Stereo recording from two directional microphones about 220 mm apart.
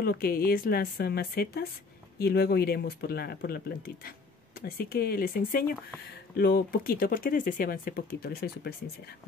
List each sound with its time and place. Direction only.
0.0 s speech: 45° left (ahead or behind)